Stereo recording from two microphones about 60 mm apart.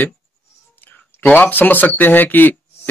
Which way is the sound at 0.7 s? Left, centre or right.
Left.